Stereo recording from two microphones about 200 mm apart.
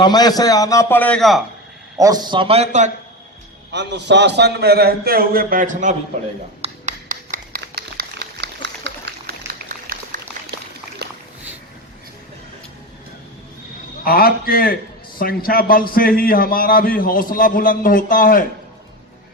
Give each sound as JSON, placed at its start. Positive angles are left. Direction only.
{"t": 0.0, "sound": "a man's voice", "side_deg": 20}
{"t": 2.0, "sound": "a man's voice", "side_deg": -20}
{"t": 3.7, "sound": "a man's voice", "side_deg": -60}
{"t": 6.6, "sound": "a sound", "side_deg": -40}
{"t": 9.5, "sound": "a sound", "side_deg": -45}
{"t": 14.0, "sound": "a man's voice", "side_deg": 50}